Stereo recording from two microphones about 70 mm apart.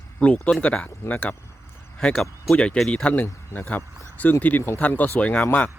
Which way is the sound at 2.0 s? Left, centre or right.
Centre.